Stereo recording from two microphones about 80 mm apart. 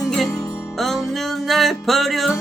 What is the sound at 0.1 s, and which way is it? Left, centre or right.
Music, centre.